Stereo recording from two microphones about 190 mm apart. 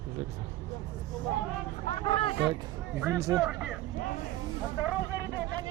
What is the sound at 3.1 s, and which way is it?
Speech, 15° right (ahead or behind).